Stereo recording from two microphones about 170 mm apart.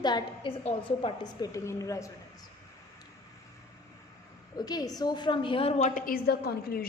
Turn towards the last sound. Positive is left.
turn(degrees=65)  # may be behind; listen again after turning